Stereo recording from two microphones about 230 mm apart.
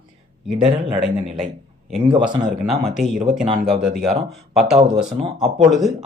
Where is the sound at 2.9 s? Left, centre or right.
Centre.